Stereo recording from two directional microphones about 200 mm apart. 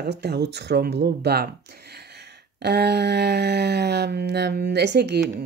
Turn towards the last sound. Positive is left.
turn(degrees=-55)  # may be behind; listen again after turning